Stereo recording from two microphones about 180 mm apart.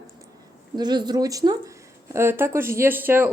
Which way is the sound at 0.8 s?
25° right (ahead or behind).